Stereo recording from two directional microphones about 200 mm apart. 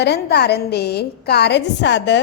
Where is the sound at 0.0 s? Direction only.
55° left (ahead or behind).